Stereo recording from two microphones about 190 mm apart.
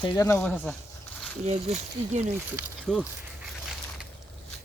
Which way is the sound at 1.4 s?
35° right (ahead or behind).